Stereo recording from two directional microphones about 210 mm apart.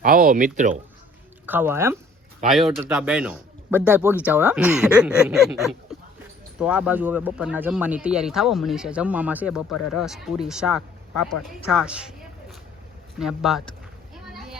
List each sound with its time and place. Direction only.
0.0 s speech: 40° right (ahead or behind)
1.5 s speech: 10° right (ahead or behind)
2.5 s speech: centre (ahead or behind)
14.3 s children playing: centre (ahead or behind)